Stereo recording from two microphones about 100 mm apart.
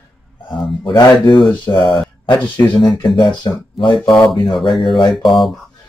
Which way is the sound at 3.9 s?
5° left (ahead or behind).